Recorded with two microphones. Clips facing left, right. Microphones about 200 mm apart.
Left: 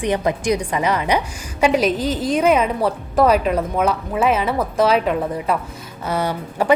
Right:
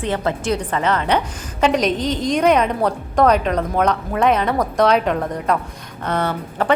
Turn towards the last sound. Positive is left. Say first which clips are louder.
# left 1 dB
turn(degrees=10)  # may be behind; listen again after turning